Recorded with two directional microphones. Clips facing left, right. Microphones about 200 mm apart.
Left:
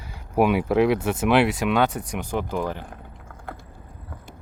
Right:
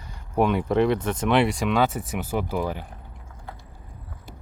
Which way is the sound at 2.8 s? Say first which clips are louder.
Left 4 dB; 50° left (ahead or behind).